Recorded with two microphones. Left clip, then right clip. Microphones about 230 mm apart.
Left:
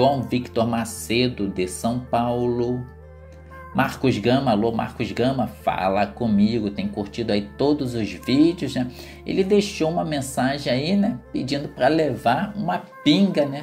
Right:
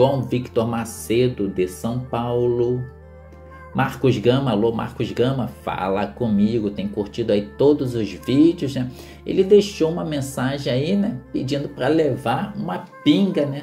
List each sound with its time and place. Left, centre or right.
0.3 s speech: centre
3.7 s speech: left